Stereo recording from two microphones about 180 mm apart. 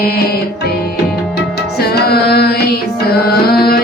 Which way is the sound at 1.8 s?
60° left (ahead or behind).